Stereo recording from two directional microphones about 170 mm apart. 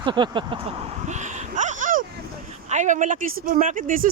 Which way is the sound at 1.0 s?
45° right (ahead or behind).